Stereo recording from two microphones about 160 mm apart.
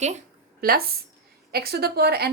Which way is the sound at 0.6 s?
70° right (ahead or behind).